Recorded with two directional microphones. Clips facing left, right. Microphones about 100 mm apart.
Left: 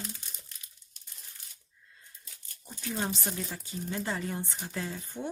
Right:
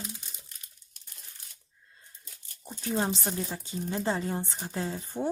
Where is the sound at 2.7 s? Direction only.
35° right (ahead or behind).